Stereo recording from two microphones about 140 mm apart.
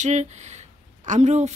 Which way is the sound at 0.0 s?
55° right (ahead or behind).